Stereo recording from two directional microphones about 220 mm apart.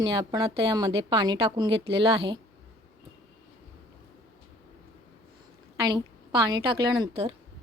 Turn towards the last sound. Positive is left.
turn(degrees=-25)  # may be behind; listen again after turning